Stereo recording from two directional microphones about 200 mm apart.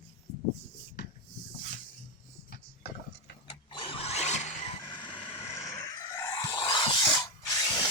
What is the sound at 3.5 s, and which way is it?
Vehicle, 25° left (ahead or behind).